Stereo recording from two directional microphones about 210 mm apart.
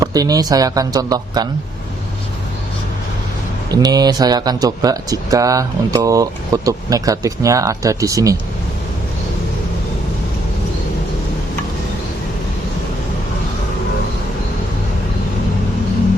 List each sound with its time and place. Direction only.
0.0 s speech: 15° right (ahead or behind)
3.7 s speech: 20° right (ahead or behind)